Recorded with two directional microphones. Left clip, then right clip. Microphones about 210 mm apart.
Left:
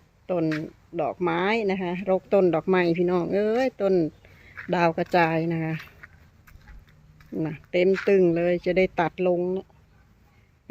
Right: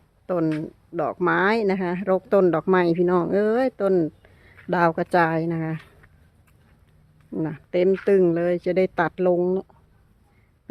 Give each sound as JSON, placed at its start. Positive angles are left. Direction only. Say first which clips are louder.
{"t": 0.3, "sound": "speech", "louder": "right 2 dB", "side_deg": -20}
{"t": 7.3, "sound": "speech", "louder": "right 1 dB", "side_deg": -15}
{"t": 9.4, "sound": "speech", "louder": "right 4 dB", "side_deg": -30}